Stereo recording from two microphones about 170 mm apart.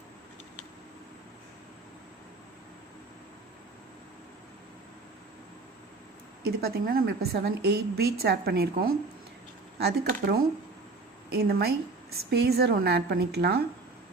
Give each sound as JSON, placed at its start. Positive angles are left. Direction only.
{"t": 6.4, "sound": "a woman's voice", "side_deg": -65}